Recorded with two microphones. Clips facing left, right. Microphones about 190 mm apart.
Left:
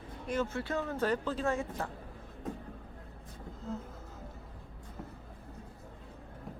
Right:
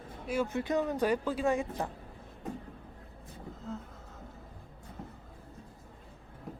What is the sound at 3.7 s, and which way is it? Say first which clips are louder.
Speech: left 1 dB; centre (ahead or behind).